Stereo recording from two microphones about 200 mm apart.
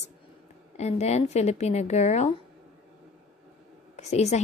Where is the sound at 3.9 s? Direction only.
35° left (ahead or behind).